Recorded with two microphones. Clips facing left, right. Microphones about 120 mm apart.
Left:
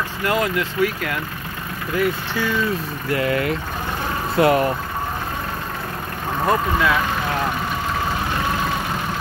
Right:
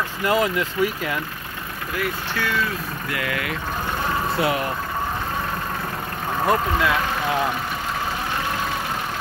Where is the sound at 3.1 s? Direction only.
35° left (ahead or behind).